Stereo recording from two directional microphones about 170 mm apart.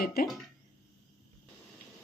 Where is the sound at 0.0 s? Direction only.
65° left (ahead or behind).